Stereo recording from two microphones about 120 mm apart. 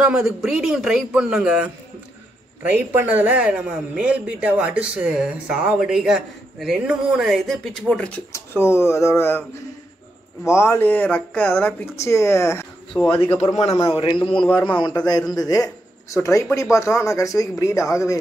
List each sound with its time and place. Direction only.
0.0 s speech: 5° right (ahead or behind)
2.7 s a man's voice: 15° right (ahead or behind); by 8.2 s 10° left (ahead or behind)
8.3 s speech: 20° left (ahead or behind)
10.6 s a man's voice: 20° left (ahead or behind)
13.6 s a man's voice: 55° left (ahead or behind)
14.8 s a man's voice: 35° left (ahead or behind)